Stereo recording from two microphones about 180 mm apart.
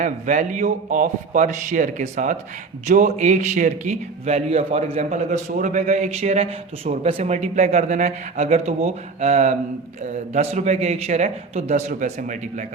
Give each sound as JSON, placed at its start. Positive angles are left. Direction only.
{"t": 0.0, "sound": "a man's voice", "side_deg": -45}